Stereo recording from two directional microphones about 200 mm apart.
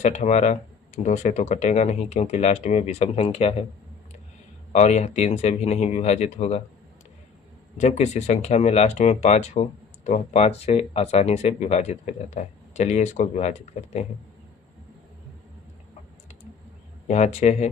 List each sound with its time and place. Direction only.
0.0 s speech: 35° left (ahead or behind)
4.7 s speech: 35° left (ahead or behind)
7.8 s speech: 35° left (ahead or behind)
17.1 s speech: 35° left (ahead or behind)